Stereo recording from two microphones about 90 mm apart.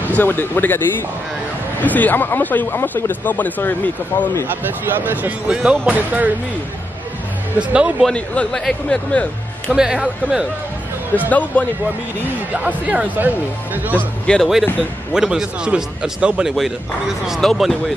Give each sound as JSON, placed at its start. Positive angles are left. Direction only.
{"t": 0.1, "sound": "speech", "side_deg": 20}
{"t": 4.5, "sound": "speech", "side_deg": -20}
{"t": 7.5, "sound": "a man's voice", "side_deg": -15}
{"t": 8.1, "sound": "speech", "side_deg": 10}
{"t": 9.8, "sound": "a man's voice", "side_deg": -5}
{"t": 11.2, "sound": "speech", "side_deg": 15}
{"t": 12.5, "sound": "a man's voice", "side_deg": -15}
{"t": 13.9, "sound": "speech", "side_deg": 10}
{"t": 15.1, "sound": "a man's voice", "side_deg": -5}
{"t": 17.3, "sound": "speech", "side_deg": 0}